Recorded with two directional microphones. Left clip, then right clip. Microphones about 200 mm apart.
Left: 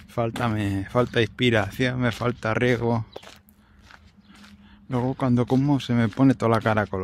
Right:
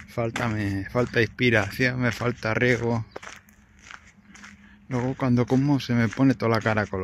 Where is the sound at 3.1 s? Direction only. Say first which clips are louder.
Right 2 dB; 10° right (ahead or behind).